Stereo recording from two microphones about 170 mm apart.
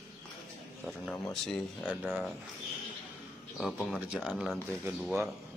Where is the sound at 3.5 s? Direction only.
Centre (ahead or behind).